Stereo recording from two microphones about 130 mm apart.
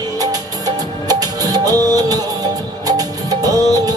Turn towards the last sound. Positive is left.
turn(degrees=-30)  # may be behind; listen again after turning